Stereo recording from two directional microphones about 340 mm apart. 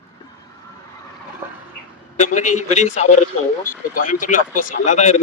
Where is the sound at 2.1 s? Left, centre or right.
Left.